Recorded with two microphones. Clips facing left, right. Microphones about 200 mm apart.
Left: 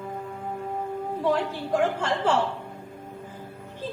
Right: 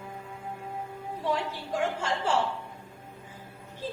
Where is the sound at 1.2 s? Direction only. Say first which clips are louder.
Left 5 dB; 55° left (ahead or behind).